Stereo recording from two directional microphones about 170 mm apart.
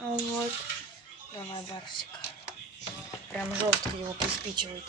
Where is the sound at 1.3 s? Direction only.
30° left (ahead or behind).